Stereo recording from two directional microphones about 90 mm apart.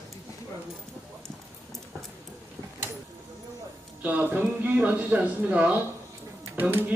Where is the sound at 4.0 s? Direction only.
20° right (ahead or behind).